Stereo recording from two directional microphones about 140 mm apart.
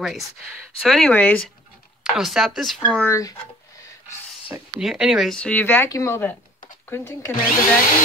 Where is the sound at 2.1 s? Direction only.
Centre (ahead or behind).